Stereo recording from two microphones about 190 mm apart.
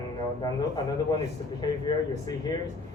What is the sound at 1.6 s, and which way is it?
Speech, 20° left (ahead or behind).